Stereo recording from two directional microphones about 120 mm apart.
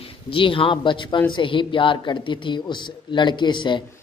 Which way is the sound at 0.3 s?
45° left (ahead or behind).